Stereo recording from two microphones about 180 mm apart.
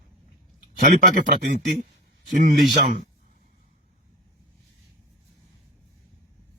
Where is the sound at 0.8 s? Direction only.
45° right (ahead or behind).